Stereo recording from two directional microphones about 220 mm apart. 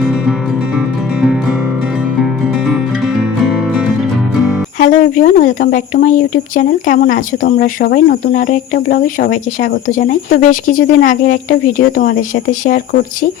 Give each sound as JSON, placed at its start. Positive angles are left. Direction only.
{"t": 0.0, "sound": "music", "side_deg": 0}
{"t": 4.8, "sound": "speech", "side_deg": 40}